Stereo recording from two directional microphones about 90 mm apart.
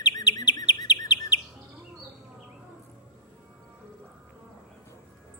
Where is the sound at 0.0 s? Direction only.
50° left (ahead or behind).